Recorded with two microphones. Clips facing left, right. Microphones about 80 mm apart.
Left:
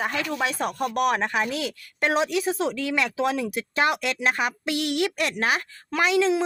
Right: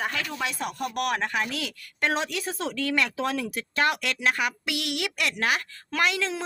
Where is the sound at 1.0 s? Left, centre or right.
Left.